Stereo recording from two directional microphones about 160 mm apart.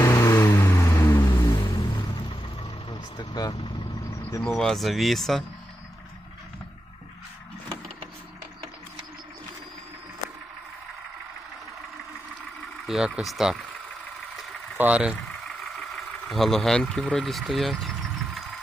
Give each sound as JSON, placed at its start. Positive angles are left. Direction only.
{"t": 0.0, "sound": "vehicle", "side_deg": 20}
{"t": 1.2, "sound": "vehicle", "side_deg": 30}
{"t": 3.2, "sound": "vehicle", "side_deg": 25}
{"t": 4.4, "sound": "speech", "side_deg": 5}
{"t": 12.8, "sound": "speech", "side_deg": -5}
{"t": 14.8, "sound": "frog", "side_deg": -10}
{"t": 16.3, "sound": "speech", "side_deg": 0}